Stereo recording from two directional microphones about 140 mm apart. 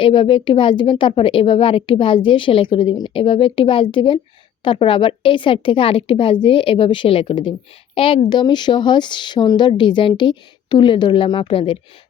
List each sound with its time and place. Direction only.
0.0 s a woman's voice: 35° left (ahead or behind)